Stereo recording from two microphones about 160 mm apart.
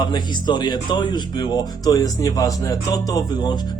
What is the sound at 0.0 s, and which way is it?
Speech, 30° left (ahead or behind).